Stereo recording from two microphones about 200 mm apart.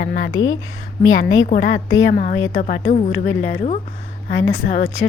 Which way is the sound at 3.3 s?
75° left (ahead or behind).